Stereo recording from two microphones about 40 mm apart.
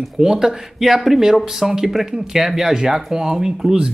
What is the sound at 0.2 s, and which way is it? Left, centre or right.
Speech, centre.